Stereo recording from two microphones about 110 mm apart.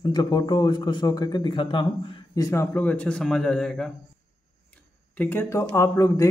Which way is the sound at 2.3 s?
25° left (ahead or behind).